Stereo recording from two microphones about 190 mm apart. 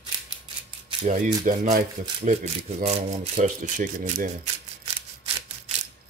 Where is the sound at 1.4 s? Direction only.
40° right (ahead or behind).